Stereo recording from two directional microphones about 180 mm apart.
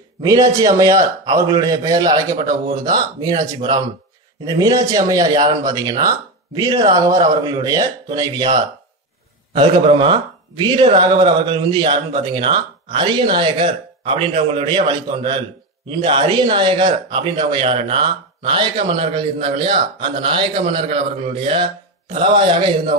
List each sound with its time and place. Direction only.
0.2 s speech: 20° right (ahead or behind)